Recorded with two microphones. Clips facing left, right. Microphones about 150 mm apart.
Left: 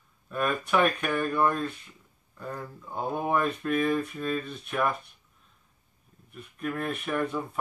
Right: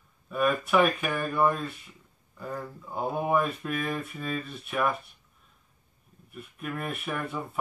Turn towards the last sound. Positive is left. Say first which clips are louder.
# left 4 dB
turn(degrees=-5)  # may be behind; listen again after turning